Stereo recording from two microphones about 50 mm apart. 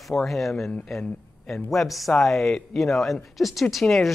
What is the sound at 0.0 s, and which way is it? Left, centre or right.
Speech, centre.